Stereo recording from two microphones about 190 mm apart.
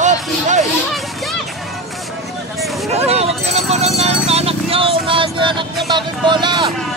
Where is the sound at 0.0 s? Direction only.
40° right (ahead or behind).